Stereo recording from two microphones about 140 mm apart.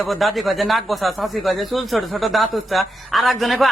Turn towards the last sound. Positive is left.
turn(degrees=0)  # may be behind; listen again after turning